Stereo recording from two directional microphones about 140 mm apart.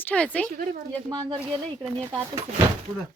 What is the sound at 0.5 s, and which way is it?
Speech, 90° right.